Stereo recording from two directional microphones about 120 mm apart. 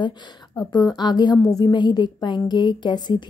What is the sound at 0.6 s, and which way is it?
A woman's voice, 35° left (ahead or behind).